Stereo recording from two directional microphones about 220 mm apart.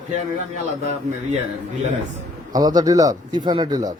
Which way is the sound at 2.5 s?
15° right (ahead or behind).